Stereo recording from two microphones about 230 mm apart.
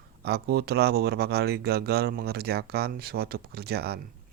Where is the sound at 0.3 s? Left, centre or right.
Right.